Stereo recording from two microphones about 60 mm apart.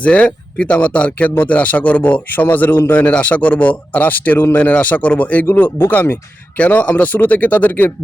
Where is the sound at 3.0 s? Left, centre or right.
Left.